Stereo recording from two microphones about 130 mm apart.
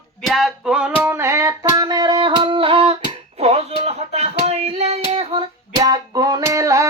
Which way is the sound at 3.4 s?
55° right (ahead or behind).